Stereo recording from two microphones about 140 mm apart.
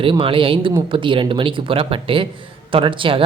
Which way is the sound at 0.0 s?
40° right (ahead or behind).